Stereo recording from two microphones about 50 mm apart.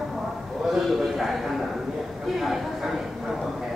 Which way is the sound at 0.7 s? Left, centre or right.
Centre.